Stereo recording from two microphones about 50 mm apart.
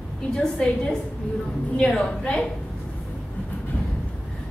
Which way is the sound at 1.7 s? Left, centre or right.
Centre.